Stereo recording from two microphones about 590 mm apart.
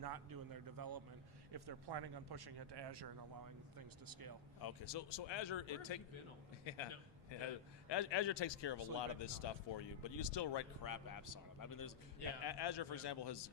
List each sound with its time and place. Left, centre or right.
0.0 s speech: right
4.6 s a man's voice: left